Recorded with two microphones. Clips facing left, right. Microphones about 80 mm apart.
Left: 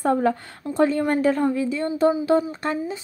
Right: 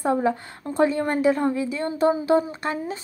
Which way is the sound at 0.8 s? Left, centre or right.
Right.